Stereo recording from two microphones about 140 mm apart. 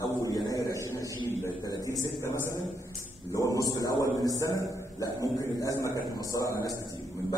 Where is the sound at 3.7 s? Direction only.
25° left (ahead or behind).